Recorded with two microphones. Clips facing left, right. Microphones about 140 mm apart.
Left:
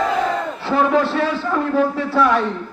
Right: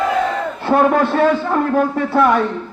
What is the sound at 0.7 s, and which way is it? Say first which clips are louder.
A man's voice: right 3 dB; 50° right (ahead or behind).